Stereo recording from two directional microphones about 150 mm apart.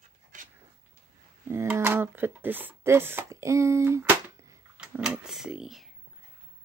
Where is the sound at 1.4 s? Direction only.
15° right (ahead or behind).